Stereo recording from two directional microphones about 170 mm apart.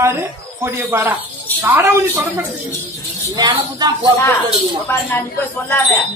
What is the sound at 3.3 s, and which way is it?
Speech, 25° right (ahead or behind).